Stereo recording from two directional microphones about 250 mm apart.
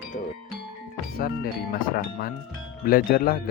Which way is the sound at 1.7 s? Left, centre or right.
Left.